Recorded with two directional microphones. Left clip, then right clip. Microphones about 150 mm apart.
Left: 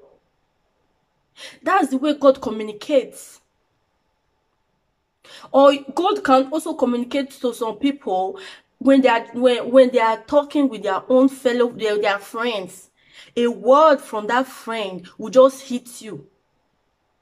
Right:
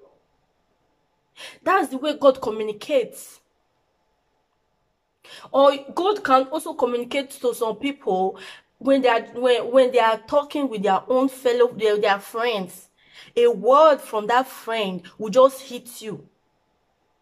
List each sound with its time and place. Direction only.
1.3 s speech: 5° right (ahead or behind)
5.2 s speech: 5° right (ahead or behind)